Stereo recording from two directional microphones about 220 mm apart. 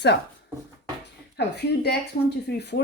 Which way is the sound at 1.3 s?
50° left (ahead or behind).